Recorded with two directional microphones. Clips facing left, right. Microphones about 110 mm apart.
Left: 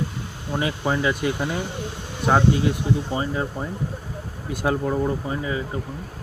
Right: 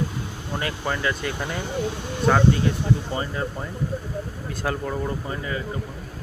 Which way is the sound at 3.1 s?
15° left (ahead or behind).